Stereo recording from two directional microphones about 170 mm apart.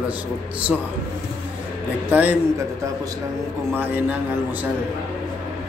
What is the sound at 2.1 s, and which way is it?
Speech, 10° right (ahead or behind).